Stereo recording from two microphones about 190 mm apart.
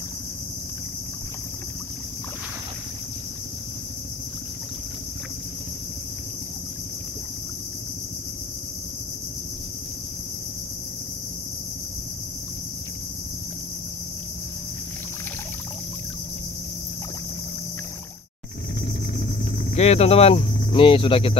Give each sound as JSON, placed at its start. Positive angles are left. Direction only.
{"t": 19.7, "sound": "speech", "side_deg": 35}